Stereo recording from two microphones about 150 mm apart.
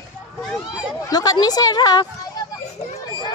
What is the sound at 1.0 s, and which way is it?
A woman's voice, 25° left (ahead or behind).